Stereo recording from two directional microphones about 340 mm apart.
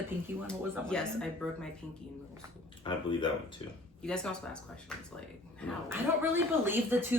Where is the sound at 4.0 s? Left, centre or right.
Centre.